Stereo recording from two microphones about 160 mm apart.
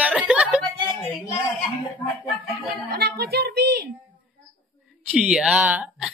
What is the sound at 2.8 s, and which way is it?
A woman's voice, 85° right.